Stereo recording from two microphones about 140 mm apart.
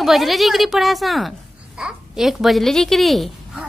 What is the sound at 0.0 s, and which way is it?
A woman's voice, centre (ahead or behind).